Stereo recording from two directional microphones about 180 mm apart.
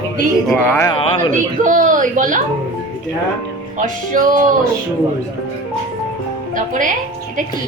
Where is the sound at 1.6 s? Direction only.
45° right (ahead or behind).